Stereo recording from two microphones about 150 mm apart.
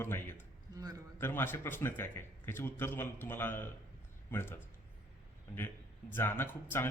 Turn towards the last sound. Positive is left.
turn(degrees=15)  # may be behind; listen again after turning